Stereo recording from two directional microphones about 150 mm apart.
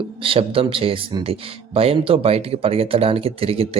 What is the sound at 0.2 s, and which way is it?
Speech, 35° right (ahead or behind).